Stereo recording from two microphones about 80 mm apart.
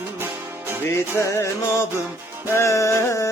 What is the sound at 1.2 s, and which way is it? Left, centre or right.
Music, left.